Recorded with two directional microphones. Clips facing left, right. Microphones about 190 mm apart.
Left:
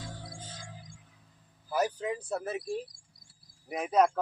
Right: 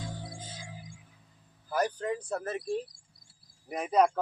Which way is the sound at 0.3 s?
10° right (ahead or behind).